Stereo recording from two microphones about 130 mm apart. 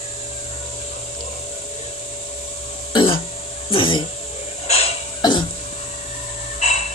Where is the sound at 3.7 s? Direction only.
40° left (ahead or behind).